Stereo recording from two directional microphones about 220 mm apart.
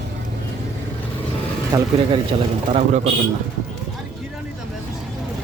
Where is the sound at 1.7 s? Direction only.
15° right (ahead or behind).